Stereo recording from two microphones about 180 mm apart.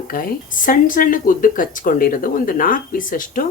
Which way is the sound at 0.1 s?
50° left (ahead or behind).